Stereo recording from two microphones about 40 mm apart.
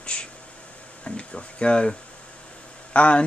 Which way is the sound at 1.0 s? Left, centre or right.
Left.